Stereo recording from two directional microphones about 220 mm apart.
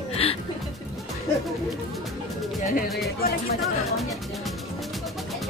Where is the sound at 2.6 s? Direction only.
40° left (ahead or behind).